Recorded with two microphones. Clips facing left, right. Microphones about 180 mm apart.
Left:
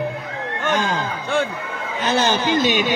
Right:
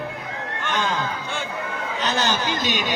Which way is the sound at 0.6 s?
45° left (ahead or behind).